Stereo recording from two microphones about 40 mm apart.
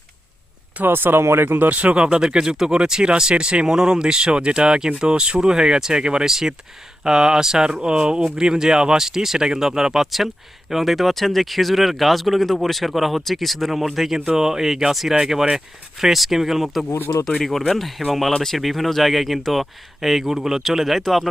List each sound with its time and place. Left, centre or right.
0.9 s speech: right
1.7 s speech: right
2.2 s speech: centre
14.3 s speech: centre
17.2 s speech: centre
17.7 s speech: centre